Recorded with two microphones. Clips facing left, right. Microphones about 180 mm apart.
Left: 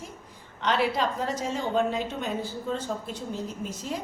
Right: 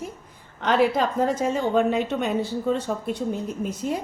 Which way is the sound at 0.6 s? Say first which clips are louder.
Right 5 dB; 45° right (ahead or behind).